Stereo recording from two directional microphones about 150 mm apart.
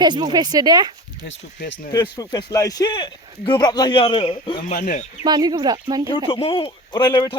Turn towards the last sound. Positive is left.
turn(degrees=30)  # may be behind; listen again after turning